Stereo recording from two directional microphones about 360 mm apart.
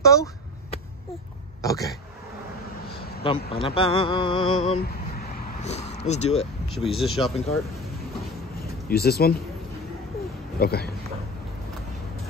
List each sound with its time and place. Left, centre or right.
0.0 s speech: centre
1.6 s speech: centre
3.3 s speech: centre
6.7 s speech: centre
8.8 s speech: left
10.6 s speech: left